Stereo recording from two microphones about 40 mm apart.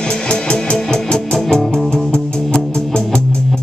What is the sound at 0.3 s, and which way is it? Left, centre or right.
Music, left.